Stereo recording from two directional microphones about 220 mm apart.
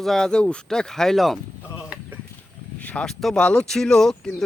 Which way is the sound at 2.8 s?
5° left (ahead or behind).